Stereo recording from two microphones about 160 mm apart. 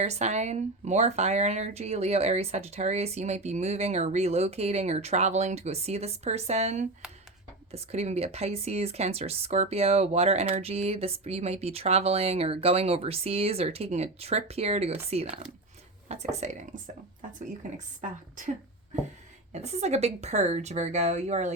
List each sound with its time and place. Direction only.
0.0 s speech: 45° right (ahead or behind)
19.5 s speech: 45° right (ahead or behind)